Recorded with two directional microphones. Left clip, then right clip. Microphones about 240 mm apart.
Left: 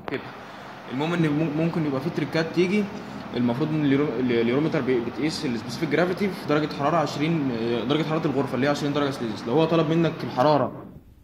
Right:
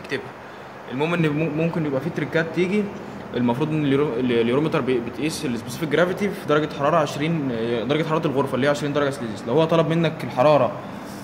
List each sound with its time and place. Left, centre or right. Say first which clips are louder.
0.9 s a man's voice: right 3 dB; centre